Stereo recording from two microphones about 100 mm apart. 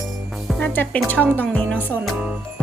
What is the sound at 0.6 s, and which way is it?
A woman's voice, 20° left (ahead or behind).